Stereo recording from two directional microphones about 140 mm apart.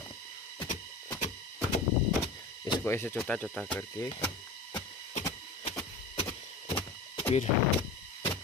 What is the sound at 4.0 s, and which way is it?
Speech, 25° left (ahead or behind).